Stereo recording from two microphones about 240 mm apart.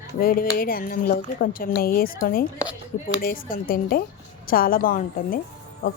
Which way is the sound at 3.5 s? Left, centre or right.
Left.